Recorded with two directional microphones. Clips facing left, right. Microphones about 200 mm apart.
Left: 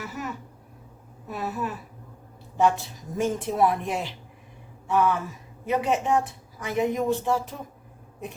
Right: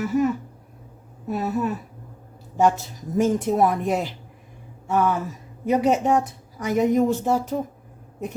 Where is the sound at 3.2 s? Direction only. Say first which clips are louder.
Right 4 dB; 45° right (ahead or behind).